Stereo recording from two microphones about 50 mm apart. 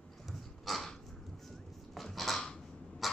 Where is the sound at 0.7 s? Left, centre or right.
Centre.